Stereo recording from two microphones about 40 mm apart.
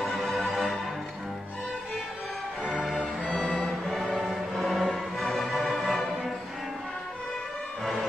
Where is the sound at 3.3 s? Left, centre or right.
Left.